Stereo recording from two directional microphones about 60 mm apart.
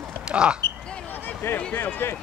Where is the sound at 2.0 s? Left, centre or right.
Left.